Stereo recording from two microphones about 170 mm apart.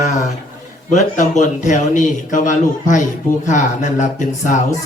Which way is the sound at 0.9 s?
45° left (ahead or behind).